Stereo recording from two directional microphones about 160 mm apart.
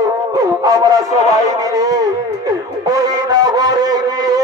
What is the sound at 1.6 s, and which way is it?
Music, 20° right (ahead or behind).